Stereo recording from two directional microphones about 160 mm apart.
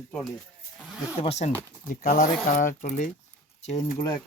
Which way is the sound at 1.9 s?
55° left (ahead or behind).